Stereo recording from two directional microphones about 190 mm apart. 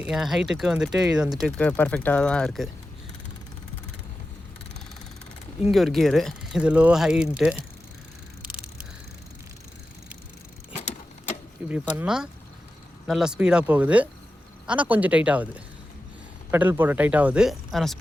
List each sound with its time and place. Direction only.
0.0 s speech: centre (ahead or behind)
5.6 s speech: centre (ahead or behind)
10.7 s vehicle: 40° left (ahead or behind)
11.7 s speech: 5° right (ahead or behind)